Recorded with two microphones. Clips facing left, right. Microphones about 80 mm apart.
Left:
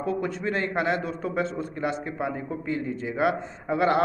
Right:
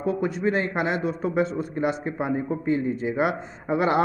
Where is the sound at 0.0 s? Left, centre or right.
Centre.